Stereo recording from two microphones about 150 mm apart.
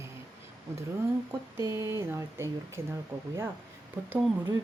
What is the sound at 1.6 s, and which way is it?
Speech, 20° right (ahead or behind).